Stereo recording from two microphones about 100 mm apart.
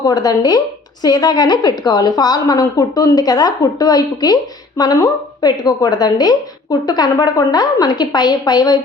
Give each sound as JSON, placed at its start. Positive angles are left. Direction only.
{"t": 0.0, "sound": "a woman's voice", "side_deg": 40}